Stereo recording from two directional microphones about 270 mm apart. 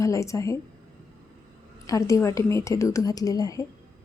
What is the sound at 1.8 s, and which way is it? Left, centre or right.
A woman's voice, centre.